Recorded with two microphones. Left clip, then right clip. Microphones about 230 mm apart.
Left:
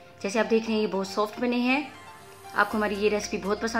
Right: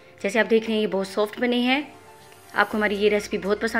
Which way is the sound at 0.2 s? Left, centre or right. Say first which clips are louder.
Right 4 dB; centre.